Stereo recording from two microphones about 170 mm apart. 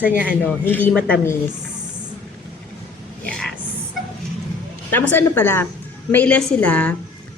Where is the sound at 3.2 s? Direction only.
5° left (ahead or behind).